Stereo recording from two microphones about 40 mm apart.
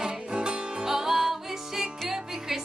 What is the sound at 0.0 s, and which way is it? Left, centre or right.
Music, right.